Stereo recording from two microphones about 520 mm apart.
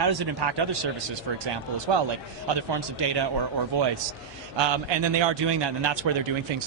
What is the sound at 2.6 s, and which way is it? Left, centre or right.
Speech, right.